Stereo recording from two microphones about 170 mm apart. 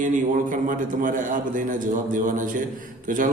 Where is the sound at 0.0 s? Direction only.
50° right (ahead or behind).